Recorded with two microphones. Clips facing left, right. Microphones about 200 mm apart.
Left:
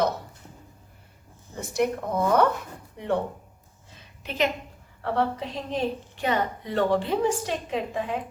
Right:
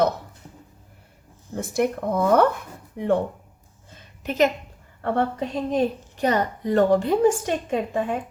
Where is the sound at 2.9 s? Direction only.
55° right (ahead or behind).